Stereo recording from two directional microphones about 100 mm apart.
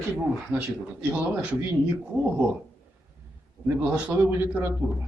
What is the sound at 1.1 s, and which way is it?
Speech, 15° right (ahead or behind).